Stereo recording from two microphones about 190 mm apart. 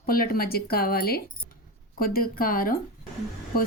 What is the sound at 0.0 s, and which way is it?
Speech, 50° left (ahead or behind).